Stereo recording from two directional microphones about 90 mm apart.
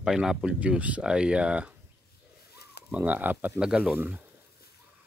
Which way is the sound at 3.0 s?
20° right (ahead or behind).